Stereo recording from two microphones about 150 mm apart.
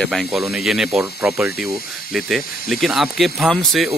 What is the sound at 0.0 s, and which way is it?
Speech, centre (ahead or behind).